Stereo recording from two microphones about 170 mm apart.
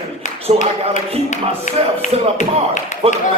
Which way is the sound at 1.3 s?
45° left (ahead or behind).